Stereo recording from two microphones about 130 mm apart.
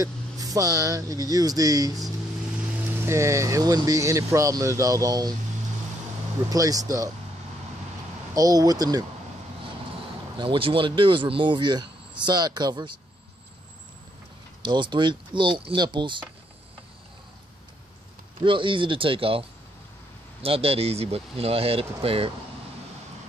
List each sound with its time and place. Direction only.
0.0 s speech: 25° right (ahead or behind)
6.5 s speech: 25° right (ahead or behind)
8.4 s speech: 30° right (ahead or behind)
10.3 s speech: 40° right (ahead or behind)
14.6 s speech: 35° right (ahead or behind)
18.4 s speech: 40° right (ahead or behind)
20.4 s speech: 50° right (ahead or behind)